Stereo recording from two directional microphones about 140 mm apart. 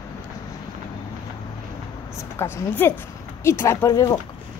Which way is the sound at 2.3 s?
15° left (ahead or behind).